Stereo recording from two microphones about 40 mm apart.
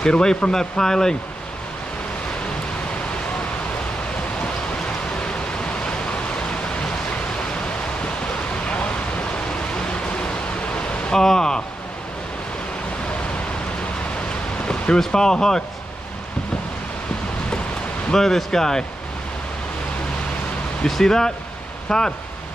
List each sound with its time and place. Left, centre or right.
0.0 s speech: centre
4.4 s a sound: left
8.6 s a sound: left
11.2 s speech: centre
15.0 s speech: centre
18.1 s speech: centre
20.9 s speech: centre